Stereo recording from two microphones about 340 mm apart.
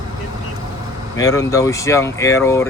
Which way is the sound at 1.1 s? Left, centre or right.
Centre.